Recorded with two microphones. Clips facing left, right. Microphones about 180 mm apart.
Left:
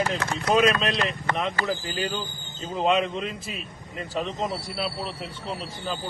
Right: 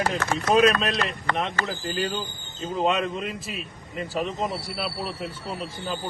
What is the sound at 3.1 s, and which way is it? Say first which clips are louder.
Speech: even; centre (ahead or behind).